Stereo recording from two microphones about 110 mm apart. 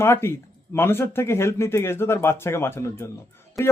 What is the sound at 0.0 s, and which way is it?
Speech, 25° left (ahead or behind).